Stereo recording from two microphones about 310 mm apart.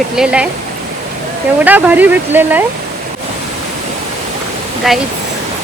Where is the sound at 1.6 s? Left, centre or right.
Centre.